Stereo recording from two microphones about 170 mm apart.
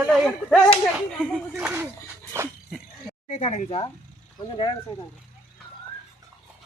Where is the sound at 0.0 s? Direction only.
Centre (ahead or behind).